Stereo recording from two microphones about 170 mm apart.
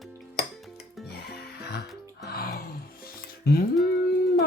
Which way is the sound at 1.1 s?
70° left (ahead or behind).